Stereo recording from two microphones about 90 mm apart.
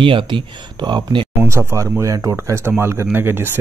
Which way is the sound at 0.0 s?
70° right (ahead or behind).